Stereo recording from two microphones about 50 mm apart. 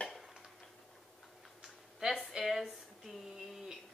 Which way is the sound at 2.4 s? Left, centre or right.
Centre.